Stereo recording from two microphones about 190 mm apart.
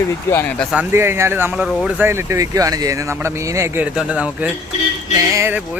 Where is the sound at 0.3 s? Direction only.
10° left (ahead or behind).